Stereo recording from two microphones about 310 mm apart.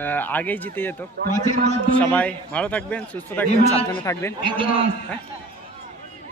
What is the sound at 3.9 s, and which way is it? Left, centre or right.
Speech, centre.